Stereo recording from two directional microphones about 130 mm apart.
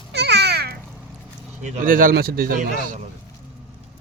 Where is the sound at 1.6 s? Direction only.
65° right (ahead or behind); by 2.1 s 90° right.